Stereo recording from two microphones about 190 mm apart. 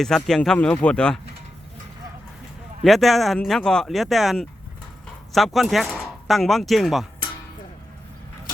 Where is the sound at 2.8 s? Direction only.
Centre (ahead or behind).